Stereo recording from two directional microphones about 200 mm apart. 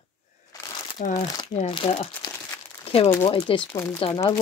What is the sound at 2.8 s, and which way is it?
Crumpling, 30° left (ahead or behind).